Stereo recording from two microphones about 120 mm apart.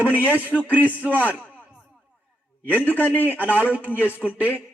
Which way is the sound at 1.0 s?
15° left (ahead or behind).